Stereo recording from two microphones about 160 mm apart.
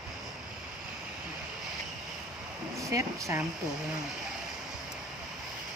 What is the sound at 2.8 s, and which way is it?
Speech, 20° right (ahead or behind).